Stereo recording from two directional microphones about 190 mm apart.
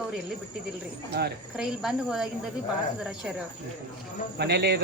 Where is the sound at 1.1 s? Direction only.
60° right (ahead or behind).